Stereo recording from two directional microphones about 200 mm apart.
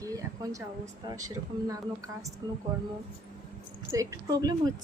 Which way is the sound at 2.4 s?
20° right (ahead or behind).